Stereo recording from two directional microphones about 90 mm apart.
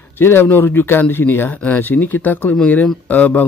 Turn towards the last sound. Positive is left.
turn(degrees=15)  # may be behind; listen again after turning